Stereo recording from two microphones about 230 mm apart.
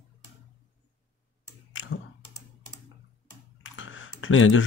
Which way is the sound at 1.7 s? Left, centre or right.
Left.